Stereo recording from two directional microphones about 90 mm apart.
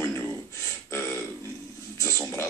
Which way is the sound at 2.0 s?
30° left (ahead or behind).